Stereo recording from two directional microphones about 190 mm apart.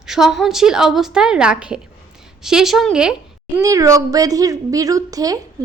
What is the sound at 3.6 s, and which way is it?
A woman's voice, 15° right (ahead or behind).